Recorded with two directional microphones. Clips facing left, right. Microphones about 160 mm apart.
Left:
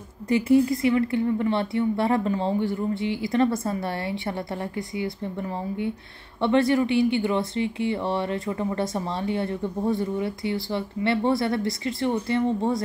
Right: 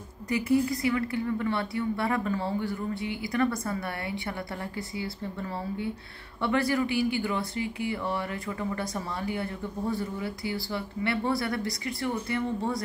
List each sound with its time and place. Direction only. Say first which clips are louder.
0.3 s speech: left 6 dB; 25° left (ahead or behind)